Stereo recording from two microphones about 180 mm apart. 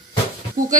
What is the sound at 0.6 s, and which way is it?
Speech, 50° right (ahead or behind).